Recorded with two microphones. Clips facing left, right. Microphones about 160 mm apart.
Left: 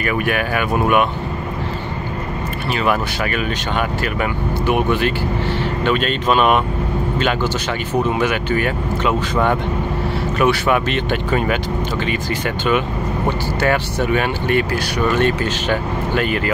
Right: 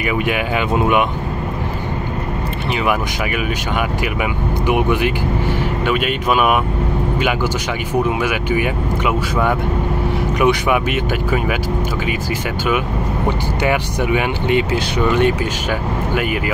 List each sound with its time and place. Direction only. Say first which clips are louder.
0.0 s speech: even; 15° right (ahead or behind)
2.7 s speech: even; 15° right (ahead or behind)
7.9 s speech: even; 10° right (ahead or behind)
13.6 s speech: left 1 dB; 15° right (ahead or behind)